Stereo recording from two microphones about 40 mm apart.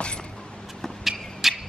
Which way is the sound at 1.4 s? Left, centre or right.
Centre.